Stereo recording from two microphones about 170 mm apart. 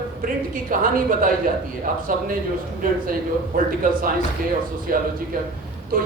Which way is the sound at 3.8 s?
55° right (ahead or behind).